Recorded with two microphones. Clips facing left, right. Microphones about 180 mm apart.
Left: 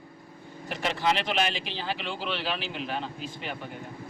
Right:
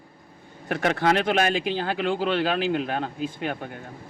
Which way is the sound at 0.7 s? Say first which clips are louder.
Right 6 dB; 55° right (ahead or behind).